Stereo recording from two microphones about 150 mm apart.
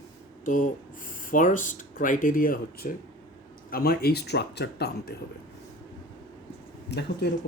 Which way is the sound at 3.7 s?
90° left.